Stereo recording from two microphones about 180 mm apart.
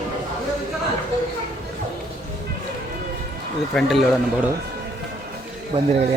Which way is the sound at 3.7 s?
Centre (ahead or behind).